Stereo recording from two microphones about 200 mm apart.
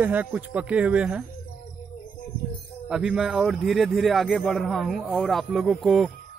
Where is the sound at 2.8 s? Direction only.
5° right (ahead or behind).